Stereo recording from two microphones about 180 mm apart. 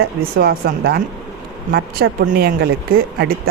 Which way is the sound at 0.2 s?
55° right (ahead or behind).